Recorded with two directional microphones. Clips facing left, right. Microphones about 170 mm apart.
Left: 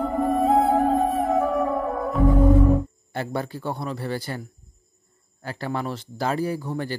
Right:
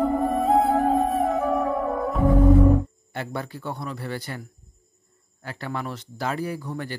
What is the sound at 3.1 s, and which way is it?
Speech, 35° left (ahead or behind).